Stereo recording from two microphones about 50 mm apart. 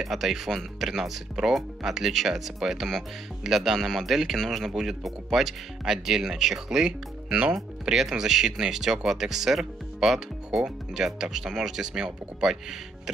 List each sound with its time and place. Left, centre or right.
0.0 s speech: centre